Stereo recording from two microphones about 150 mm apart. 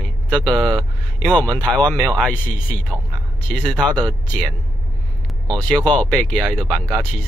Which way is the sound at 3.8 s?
30° right (ahead or behind).